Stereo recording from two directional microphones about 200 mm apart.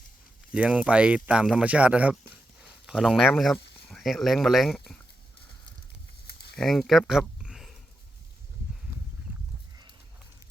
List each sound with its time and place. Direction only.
0.5 s speech: 5° right (ahead or behind)
6.2 s a sound: 55° left (ahead or behind)
6.6 s speech: centre (ahead or behind)